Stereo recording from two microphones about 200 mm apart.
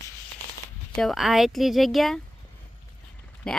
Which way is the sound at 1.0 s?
Centre (ahead or behind).